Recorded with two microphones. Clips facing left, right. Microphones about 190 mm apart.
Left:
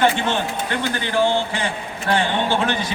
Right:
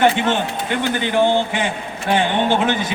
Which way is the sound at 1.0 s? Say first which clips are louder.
Right 3 dB; 20° right (ahead or behind).